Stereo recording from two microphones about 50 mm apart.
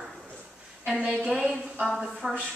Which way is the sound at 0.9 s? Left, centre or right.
Right.